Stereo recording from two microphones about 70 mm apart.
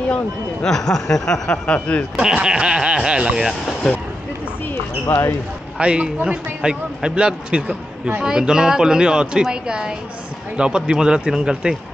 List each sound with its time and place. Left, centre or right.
0.1 s speech: centre
2.1 s a man's voice: centre
5.0 s speech: left
5.8 s a man's voice: centre